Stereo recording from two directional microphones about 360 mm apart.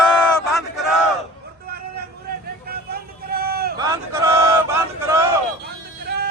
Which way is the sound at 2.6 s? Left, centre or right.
Right.